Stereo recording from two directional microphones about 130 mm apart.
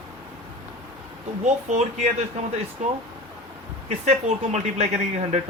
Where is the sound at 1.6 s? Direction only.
60° right (ahead or behind).